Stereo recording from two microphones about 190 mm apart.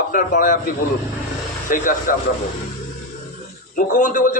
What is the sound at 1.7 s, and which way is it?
Speech, 45° left (ahead or behind).